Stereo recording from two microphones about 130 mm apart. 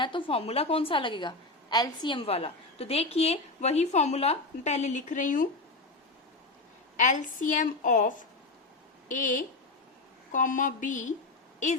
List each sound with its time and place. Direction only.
0.0 s a woman's voice: 40° left (ahead or behind); by 5.5 s 90° left
6.9 s a woman's voice: 75° left (ahead or behind)